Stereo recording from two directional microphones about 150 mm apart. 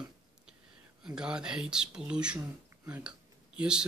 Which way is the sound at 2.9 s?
10° right (ahead or behind).